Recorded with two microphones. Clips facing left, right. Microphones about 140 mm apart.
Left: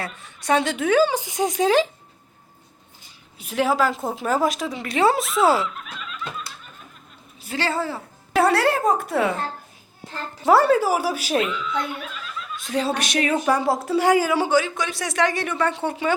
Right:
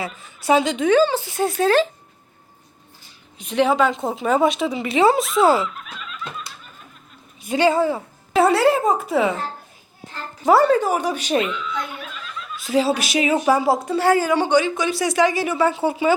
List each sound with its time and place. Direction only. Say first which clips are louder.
0.0 s a woman's voice: right 4 dB; centre (ahead or behind)
3.3 s speech: right 3 dB; 5° left (ahead or behind)
7.4 s speech: right 8 dB; 15° right (ahead or behind)
8.3 s speech: right 3 dB; centre (ahead or behind)
10.4 s speech: right 1 dB; centre (ahead or behind)
14.0 s a woman's voice: even; 15° left (ahead or behind)
14.3 s speech: right 2 dB; 5° left (ahead or behind)